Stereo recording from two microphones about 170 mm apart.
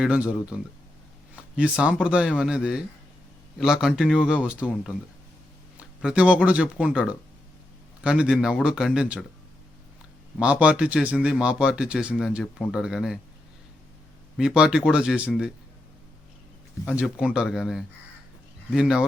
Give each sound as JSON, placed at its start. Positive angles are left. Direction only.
{"t": 0.0, "sound": "speech", "side_deg": -5}
{"t": 1.8, "sound": "speech", "side_deg": -5}
{"t": 10.3, "sound": "speech", "side_deg": -5}
{"t": 14.3, "sound": "speech", "side_deg": -5}
{"t": 16.9, "sound": "speech", "side_deg": -5}